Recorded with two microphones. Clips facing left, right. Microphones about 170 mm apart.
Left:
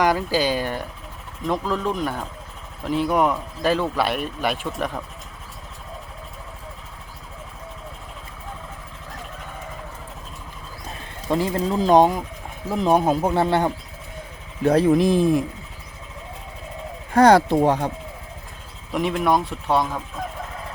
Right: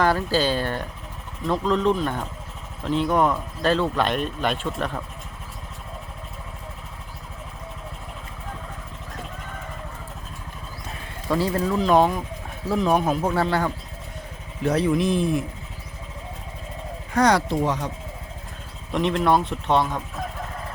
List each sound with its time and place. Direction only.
0.0 s speech: 10° left (ahead or behind)
11.3 s speech: 20° left (ahead or behind)
14.7 s speech: 45° left (ahead or behind)
17.2 s speech: 55° left (ahead or behind)
18.9 s speech: 10° left (ahead or behind)